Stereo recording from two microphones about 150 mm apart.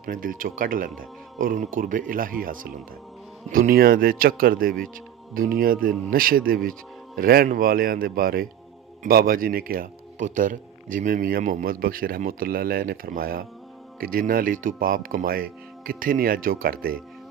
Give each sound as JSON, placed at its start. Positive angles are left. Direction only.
{"t": 0.0, "sound": "speech", "side_deg": -65}